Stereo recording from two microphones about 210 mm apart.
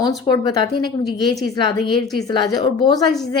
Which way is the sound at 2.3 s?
20° left (ahead or behind).